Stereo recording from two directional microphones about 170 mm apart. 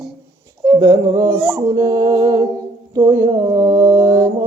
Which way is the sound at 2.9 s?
15° right (ahead or behind).